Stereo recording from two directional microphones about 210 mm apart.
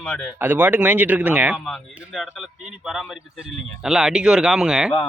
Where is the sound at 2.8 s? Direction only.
Centre (ahead or behind).